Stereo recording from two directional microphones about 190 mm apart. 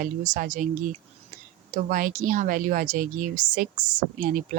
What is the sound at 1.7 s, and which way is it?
Speech, 45° right (ahead or behind).